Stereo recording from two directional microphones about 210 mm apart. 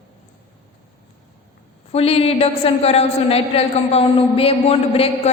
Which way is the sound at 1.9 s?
30° left (ahead or behind).